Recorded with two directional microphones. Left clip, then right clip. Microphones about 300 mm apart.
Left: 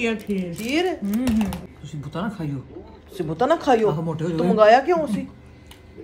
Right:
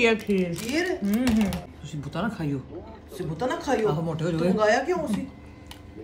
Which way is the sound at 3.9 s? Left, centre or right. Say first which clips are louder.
Left 3 dB; left.